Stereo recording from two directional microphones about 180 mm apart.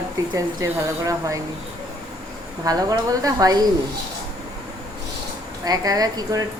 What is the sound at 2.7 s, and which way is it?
Speech, 20° right (ahead or behind).